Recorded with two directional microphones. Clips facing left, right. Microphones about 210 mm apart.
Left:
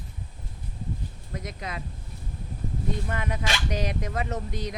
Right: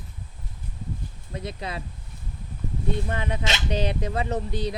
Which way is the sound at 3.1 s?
30° right (ahead or behind).